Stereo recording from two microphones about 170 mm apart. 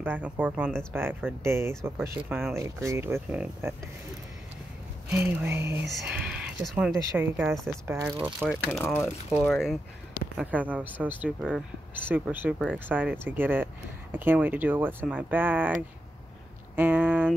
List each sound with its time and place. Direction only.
0.0 s speech: 10° right (ahead or behind)
5.1 s speech: 10° right (ahead or behind)
7.2 s speech: 10° right (ahead or behind)
8.5 s speech: centre (ahead or behind)
8.8 s speech: 15° left (ahead or behind)
9.3 s speech: centre (ahead or behind)
16.7 s speech: 10° right (ahead or behind)